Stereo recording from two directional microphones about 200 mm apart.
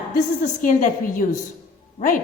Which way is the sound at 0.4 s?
40° left (ahead or behind).